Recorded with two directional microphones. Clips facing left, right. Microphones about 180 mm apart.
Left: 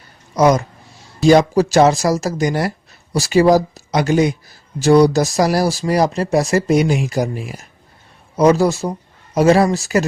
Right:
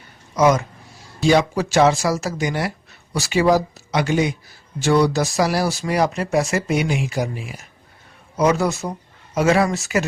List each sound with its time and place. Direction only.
0.3 s speech: 35° left (ahead or behind)